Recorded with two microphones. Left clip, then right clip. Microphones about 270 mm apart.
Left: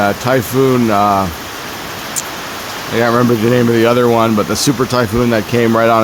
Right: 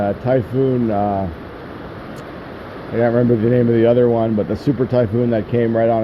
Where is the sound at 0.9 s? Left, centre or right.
Left.